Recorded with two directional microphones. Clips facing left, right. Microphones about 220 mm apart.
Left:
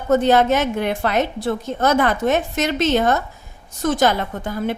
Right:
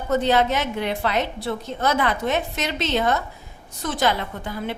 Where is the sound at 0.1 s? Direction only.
50° left (ahead or behind).